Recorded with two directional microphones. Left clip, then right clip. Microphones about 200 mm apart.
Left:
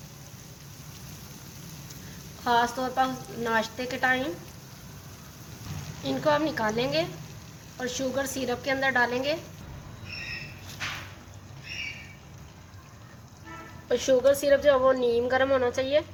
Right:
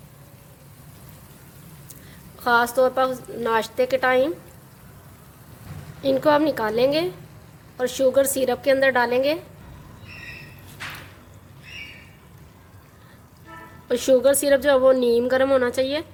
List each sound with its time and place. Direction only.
2.4 s a woman's voice: 50° right (ahead or behind)
6.0 s a woman's voice: 50° right (ahead or behind)
13.8 s a woman's voice: 40° right (ahead or behind)